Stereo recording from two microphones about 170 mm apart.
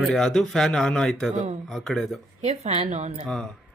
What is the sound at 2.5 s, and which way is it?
Speech, 40° right (ahead or behind).